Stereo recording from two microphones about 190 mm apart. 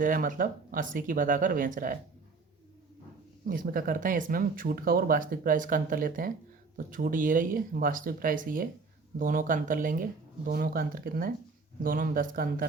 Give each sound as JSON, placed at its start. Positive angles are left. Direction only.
{"t": 0.0, "sound": "speech", "side_deg": -45}
{"t": 3.4, "sound": "speech", "side_deg": -45}